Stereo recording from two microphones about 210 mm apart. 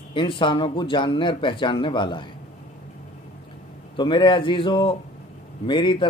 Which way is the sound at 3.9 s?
20° left (ahead or behind).